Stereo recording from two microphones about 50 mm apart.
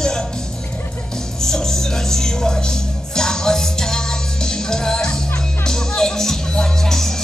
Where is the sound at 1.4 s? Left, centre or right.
Centre.